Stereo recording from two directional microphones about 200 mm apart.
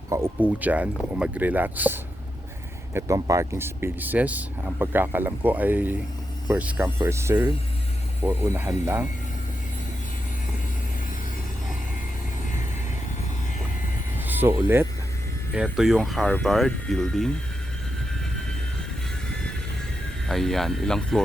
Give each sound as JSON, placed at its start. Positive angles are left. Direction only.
{"t": 0.1, "sound": "speech", "side_deg": -10}
{"t": 14.3, "sound": "speech", "side_deg": -10}
{"t": 20.2, "sound": "speech", "side_deg": 0}